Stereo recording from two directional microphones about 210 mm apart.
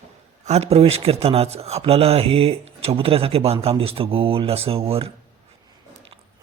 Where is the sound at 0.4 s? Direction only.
30° right (ahead or behind).